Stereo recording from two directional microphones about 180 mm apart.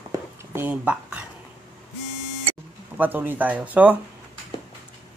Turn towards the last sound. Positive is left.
turn(degrees=-10)  # may be behind; listen again after turning